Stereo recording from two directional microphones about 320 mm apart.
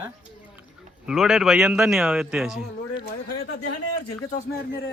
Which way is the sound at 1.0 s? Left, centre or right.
Centre.